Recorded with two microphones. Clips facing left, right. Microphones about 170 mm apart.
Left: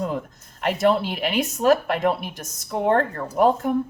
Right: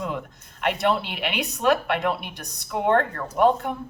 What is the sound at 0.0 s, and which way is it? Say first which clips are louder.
Speech: left 3 dB; 40° left (ahead or behind).